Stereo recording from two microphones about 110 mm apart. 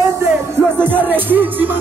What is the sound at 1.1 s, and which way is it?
Music, 15° right (ahead or behind).